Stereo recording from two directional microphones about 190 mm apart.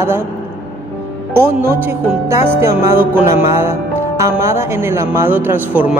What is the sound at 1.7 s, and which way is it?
Speech, 10° right (ahead or behind).